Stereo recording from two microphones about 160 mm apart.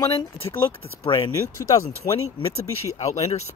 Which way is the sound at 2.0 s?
35° left (ahead or behind).